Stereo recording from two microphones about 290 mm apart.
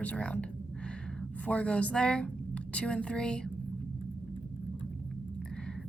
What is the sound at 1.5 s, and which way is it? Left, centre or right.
Speech, centre.